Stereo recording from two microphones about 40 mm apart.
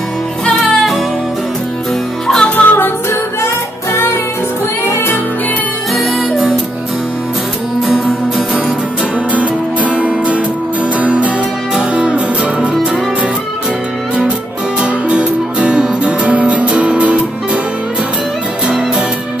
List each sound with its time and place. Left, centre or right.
2.5 s music: left
5.9 s music: centre
7.8 s music: centre
9.3 s music: right
11.9 s music: right
14.8 s music: right